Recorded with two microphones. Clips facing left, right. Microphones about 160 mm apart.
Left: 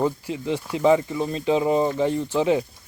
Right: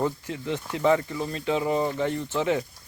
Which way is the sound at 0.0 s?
20° left (ahead or behind).